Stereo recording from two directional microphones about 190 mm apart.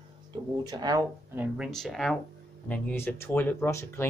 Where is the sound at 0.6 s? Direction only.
20° right (ahead or behind).